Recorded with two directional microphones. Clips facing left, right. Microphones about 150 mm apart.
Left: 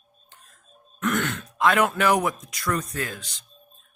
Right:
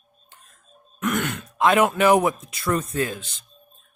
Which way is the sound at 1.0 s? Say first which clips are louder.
Right 1 dB; 15° right (ahead or behind).